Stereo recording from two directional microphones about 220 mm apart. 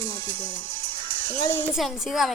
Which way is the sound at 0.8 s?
20° right (ahead or behind).